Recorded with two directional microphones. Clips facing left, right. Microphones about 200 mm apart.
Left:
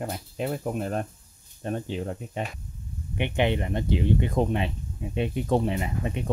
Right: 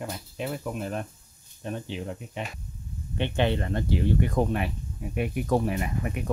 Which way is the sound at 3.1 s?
15° left (ahead or behind).